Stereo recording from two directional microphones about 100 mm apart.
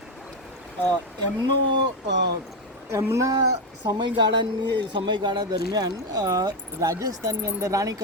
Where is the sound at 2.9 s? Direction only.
30° right (ahead or behind).